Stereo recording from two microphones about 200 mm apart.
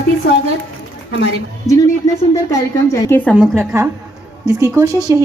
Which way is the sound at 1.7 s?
15° left (ahead or behind).